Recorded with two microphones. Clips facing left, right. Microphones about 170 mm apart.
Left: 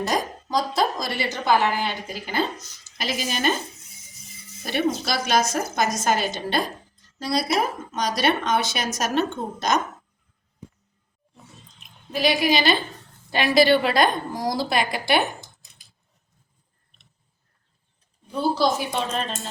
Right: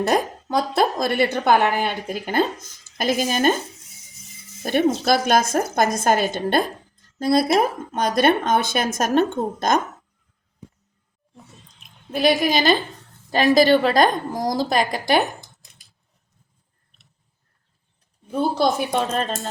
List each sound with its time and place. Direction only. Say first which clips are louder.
0.0 s a woman's voice: right 5 dB; 60° right (ahead or behind)
4.6 s a woman's voice: right 5 dB; 50° right (ahead or behind)
12.1 s a woman's voice: right 2 dB; 50° right (ahead or behind)
18.3 s a woman's voice: right 2 dB; 55° right (ahead or behind)